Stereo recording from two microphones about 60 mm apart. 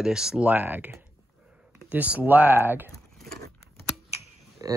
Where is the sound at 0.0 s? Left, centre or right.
Centre.